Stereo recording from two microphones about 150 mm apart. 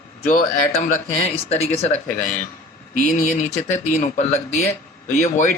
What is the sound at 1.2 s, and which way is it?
Speech, 45° left (ahead or behind).